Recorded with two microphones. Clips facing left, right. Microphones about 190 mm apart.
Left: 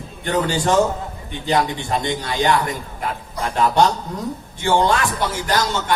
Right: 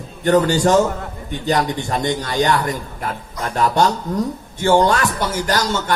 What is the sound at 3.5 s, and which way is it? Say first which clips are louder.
Speech: even; 45° right (ahead or behind).